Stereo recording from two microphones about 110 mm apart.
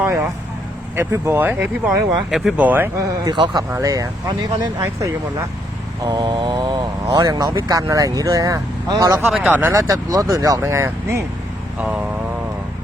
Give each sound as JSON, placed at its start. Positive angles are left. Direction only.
{"t": 0.9, "sound": "speech", "side_deg": -25}
{"t": 2.3, "sound": "speech", "side_deg": -5}
{"t": 2.6, "sound": "speech", "side_deg": -15}
{"t": 3.0, "sound": "mantra", "side_deg": -40}
{"t": 3.7, "sound": "speech", "side_deg": -30}
{"t": 6.0, "sound": "mantra", "side_deg": -40}
{"t": 6.7, "sound": "speech", "side_deg": -35}
{"t": 9.3, "sound": "speech", "side_deg": -15}
{"t": 9.7, "sound": "speech", "side_deg": -30}
{"t": 11.8, "sound": "speech", "side_deg": -10}